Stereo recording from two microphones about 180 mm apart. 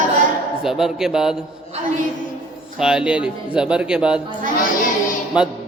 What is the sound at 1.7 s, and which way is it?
Speech, 35° right (ahead or behind).